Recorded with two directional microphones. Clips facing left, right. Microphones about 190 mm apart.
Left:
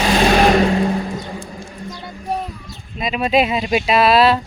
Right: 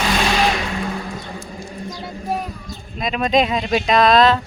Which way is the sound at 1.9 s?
5° right (ahead or behind).